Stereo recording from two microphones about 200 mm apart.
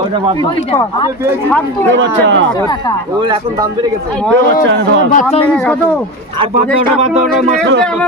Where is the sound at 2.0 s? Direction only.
65° right (ahead or behind).